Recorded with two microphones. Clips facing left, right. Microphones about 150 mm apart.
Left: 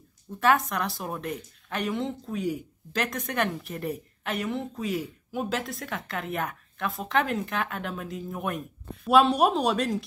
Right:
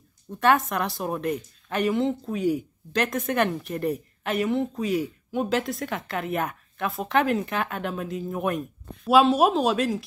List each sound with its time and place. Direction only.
0.4 s speech: centre (ahead or behind)